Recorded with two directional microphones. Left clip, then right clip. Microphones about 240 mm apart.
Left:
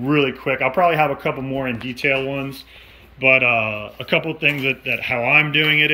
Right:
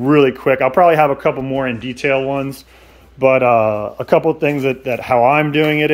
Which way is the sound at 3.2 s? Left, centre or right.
Right.